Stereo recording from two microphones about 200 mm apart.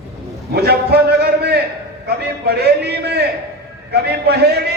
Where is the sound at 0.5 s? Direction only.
55° right (ahead or behind).